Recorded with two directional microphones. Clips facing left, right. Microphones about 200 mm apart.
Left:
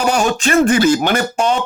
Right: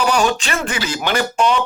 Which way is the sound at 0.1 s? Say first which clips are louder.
Left 3 dB; 45° left (ahead or behind).